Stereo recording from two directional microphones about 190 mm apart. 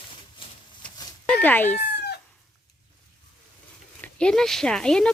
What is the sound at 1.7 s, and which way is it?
Cat, 60° left (ahead or behind).